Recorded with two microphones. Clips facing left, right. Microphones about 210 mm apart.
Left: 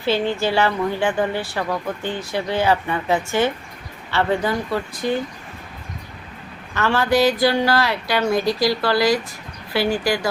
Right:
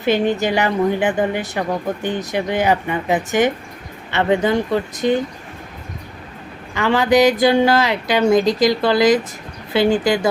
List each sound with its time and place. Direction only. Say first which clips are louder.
0.0 s a woman's voice: right 3 dB; 20° right (ahead or behind)
6.7 s speech: right 4 dB; 15° right (ahead or behind)